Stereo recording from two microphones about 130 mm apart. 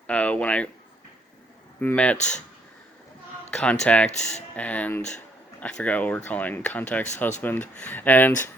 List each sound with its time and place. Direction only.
0.1 s speech: 10° left (ahead or behind)
1.8 s speech: 15° left (ahead or behind)
2.1 s speech: 65° left (ahead or behind)
3.5 s speech: 10° left (ahead or behind)